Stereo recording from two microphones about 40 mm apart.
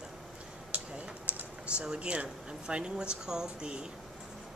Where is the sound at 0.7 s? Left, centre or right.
Right.